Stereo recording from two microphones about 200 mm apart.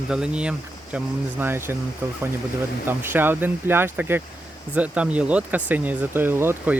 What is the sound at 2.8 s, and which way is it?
Speech, 10° right (ahead or behind).